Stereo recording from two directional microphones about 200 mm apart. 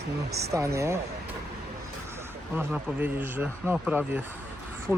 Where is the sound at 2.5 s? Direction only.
10° right (ahead or behind).